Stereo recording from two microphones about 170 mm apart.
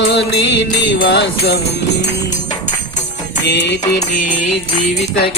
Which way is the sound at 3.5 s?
90° left.